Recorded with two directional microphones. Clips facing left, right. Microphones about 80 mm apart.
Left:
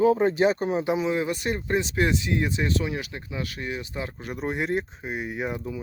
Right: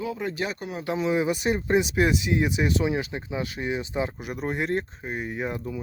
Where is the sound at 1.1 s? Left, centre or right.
Centre.